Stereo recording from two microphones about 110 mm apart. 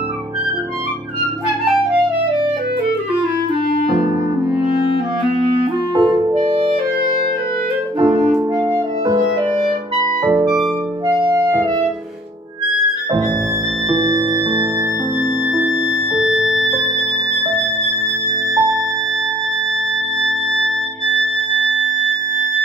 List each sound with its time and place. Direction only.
5.9 s clarinet: 50° right (ahead or behind)
6.4 s music: 55° right (ahead or behind)
8.0 s clarinet: 30° right (ahead or behind)
8.5 s music: 30° right (ahead or behind)
10.2 s music: 30° right (ahead or behind)
13.8 s music: 35° right (ahead or behind)
16.2 s music: 5° right (ahead or behind)
18.5 s music: 35° right (ahead or behind)
20.2 s music: 5° left (ahead or behind)